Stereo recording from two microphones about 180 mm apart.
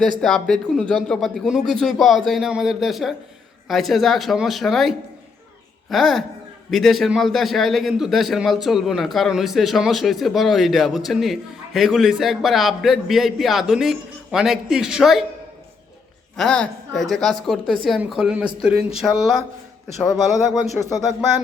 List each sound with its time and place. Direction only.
0.2 s a man's voice: centre (ahead or behind)
16.4 s a man's voice: 5° left (ahead or behind)
20.1 s speech: 20° left (ahead or behind)